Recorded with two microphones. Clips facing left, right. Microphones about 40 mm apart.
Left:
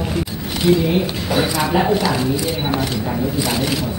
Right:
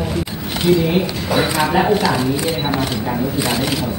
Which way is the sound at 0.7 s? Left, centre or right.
Centre.